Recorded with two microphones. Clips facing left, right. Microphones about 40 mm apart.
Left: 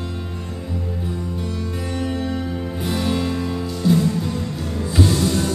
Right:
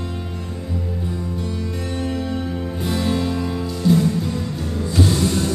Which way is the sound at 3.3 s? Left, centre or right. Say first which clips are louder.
Even; centre.